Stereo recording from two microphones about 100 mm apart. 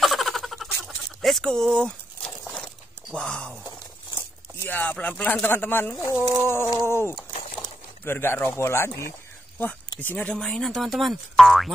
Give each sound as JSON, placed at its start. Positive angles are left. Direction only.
{"t": 0.0, "sound": "a sound", "side_deg": 0}
{"t": 4.1, "sound": "speech", "side_deg": 25}
{"t": 5.9, "sound": "speech", "side_deg": -15}
{"t": 6.4, "sound": "speech", "side_deg": 25}